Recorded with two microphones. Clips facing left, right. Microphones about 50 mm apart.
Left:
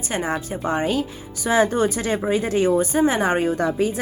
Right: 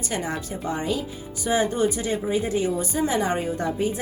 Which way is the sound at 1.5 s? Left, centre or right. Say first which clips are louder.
Left 4 dB; left.